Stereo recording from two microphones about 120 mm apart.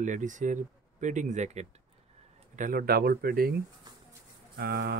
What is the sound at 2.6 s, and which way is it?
Speech, 90° right.